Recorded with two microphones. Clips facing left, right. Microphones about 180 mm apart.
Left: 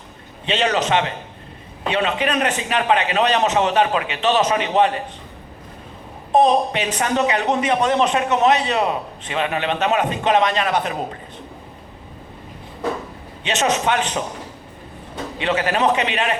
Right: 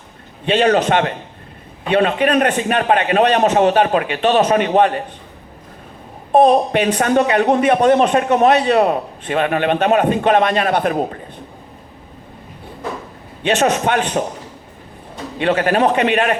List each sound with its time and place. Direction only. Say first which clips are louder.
0.4 s speech: right 6 dB; 50° right (ahead or behind)
6.4 s speech: right 5 dB; 50° right (ahead or behind)
13.4 s speech: right 4 dB; 55° right (ahead or behind)
15.4 s speech: right 5 dB; 50° right (ahead or behind)